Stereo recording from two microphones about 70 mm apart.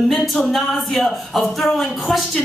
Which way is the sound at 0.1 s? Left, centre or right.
Centre.